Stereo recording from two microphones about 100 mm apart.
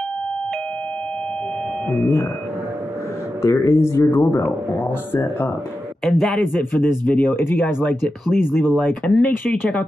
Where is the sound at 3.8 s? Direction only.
25° left (ahead or behind).